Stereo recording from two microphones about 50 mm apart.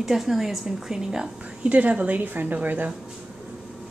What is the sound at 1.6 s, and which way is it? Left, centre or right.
A woman's voice, right.